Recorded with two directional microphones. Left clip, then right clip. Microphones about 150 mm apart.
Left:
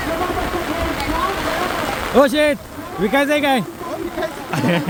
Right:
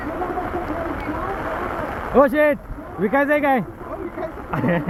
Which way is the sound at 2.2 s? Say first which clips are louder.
Left 1 dB; 15° left (ahead or behind).